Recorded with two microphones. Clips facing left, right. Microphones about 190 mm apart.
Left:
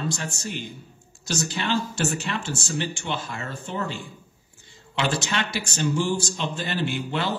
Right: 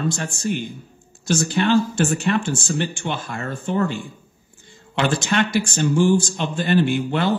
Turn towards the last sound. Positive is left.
turn(degrees=-55)  # may be behind; listen again after turning